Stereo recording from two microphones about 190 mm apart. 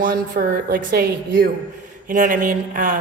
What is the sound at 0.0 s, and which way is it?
A woman's voice, 50° right (ahead or behind).